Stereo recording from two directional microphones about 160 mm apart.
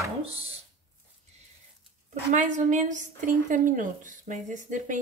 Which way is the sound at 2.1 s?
50° right (ahead or behind).